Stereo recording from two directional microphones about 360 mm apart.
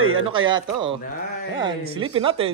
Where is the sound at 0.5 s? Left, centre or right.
Centre.